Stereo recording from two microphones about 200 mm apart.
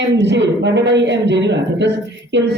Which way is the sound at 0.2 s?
60° right (ahead or behind).